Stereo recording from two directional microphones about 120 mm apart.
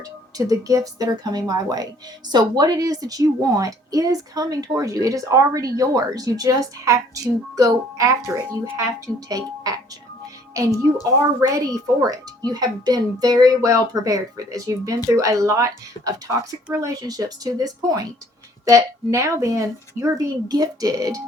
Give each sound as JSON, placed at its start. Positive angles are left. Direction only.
{"t": 0.3, "sound": "a woman's voice", "side_deg": -30}
{"t": 11.0, "sound": "a woman's voice", "side_deg": -30}